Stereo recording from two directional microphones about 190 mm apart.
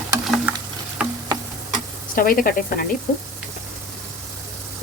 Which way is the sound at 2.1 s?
50° left (ahead or behind).